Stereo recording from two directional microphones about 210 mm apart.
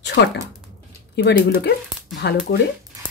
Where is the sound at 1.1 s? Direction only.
50° left (ahead or behind).